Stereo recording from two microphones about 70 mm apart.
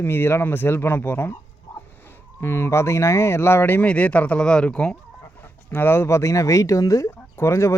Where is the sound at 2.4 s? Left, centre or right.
Left.